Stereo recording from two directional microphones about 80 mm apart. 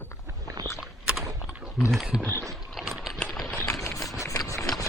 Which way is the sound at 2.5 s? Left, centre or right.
Centre.